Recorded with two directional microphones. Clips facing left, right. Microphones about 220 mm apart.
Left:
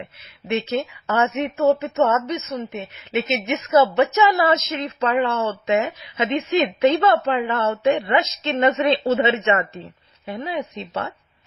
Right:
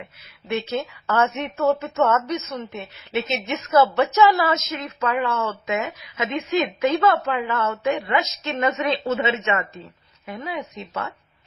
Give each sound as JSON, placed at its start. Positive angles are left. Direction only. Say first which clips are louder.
{"t": 1.0, "sound": "a woman's voice", "louder": "even", "side_deg": 20}